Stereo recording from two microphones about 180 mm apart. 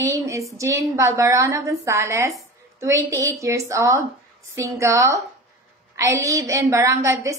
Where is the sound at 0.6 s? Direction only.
15° right (ahead or behind).